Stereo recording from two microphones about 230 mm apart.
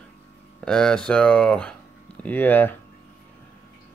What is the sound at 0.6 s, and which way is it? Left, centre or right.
Speech, centre.